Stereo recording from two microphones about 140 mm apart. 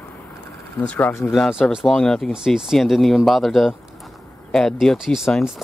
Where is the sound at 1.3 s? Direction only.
Centre (ahead or behind).